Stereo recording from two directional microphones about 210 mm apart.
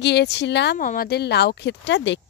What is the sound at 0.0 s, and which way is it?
Speech, 55° left (ahead or behind).